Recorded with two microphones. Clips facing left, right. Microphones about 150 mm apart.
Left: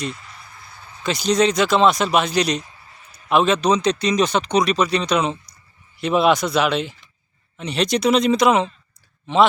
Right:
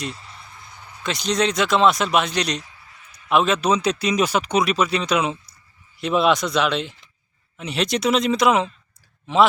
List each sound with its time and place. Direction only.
0.1 s speech: 30° right (ahead or behind)
0.7 s a sound: 15° right (ahead or behind)
1.0 s speech: centre (ahead or behind)